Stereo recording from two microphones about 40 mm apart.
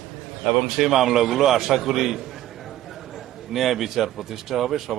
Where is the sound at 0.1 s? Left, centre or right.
Centre.